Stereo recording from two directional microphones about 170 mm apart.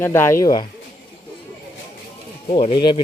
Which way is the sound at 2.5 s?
30° left (ahead or behind).